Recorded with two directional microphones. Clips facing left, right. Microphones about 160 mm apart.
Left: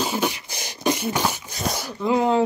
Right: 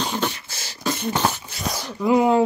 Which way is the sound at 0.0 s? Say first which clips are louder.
Left 1 dB; 10° left (ahead or behind).